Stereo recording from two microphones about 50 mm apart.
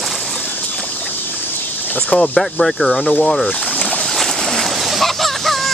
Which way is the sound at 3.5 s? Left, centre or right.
Left.